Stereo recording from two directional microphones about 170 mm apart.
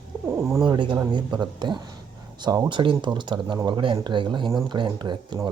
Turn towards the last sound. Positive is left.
turn(degrees=-25)  # may be behind; listen again after turning